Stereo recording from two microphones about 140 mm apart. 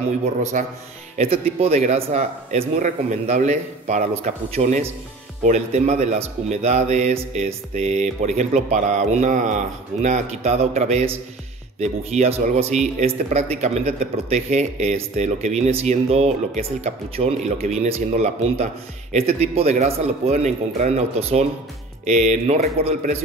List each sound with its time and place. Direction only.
0.4 s a man's voice: 55° right (ahead or behind)